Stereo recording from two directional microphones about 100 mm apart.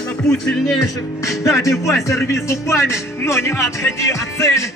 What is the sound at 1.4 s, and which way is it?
Speech, 30° left (ahead or behind).